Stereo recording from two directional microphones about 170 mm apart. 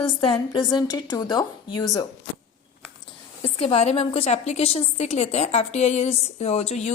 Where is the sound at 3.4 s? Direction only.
35° left (ahead or behind).